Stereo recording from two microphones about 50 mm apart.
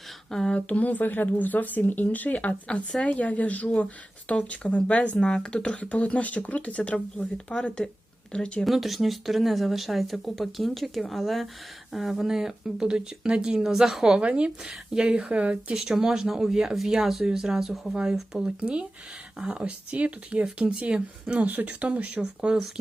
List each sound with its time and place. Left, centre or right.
0.3 s speech: centre
0.5 s speech: left
8.6 s speech: centre
14.2 s speech: right
15.7 s speech: centre
22.4 s speech: centre